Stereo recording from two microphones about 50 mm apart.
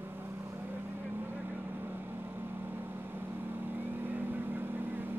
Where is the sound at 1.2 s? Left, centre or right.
Right.